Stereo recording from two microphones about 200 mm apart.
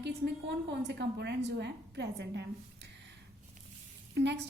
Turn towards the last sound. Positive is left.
turn(degrees=-60)  # may be behind; listen again after turning